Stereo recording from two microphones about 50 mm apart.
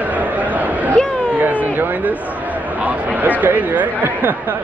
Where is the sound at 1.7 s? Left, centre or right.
Right.